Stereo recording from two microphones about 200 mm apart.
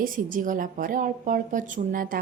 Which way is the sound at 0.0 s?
45° right (ahead or behind).